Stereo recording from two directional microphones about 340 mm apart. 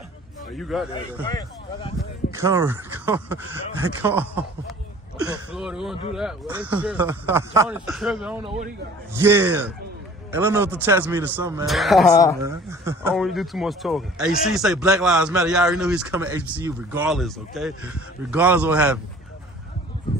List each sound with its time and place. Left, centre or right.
0.5 s a man's voice: centre
1.2 s speech: centre
2.3 s a man's voice: centre
8.4 s a man's voice: centre
9.1 s a man's voice: centre
12.4 s a man's voice: centre